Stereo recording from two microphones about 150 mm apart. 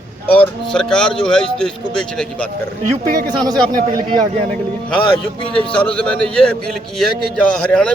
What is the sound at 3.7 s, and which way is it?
Speech, 25° right (ahead or behind).